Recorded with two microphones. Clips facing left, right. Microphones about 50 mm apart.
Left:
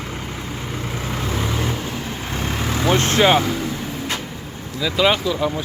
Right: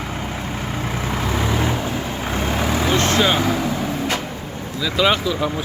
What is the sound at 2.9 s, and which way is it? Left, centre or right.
Vehicle, left.